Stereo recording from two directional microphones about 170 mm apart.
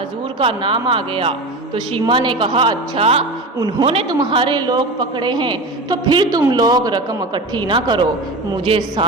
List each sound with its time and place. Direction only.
0.3 s a man's voice: 30° right (ahead or behind)